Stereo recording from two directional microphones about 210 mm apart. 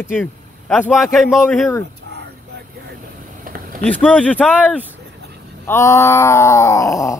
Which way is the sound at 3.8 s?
5° left (ahead or behind).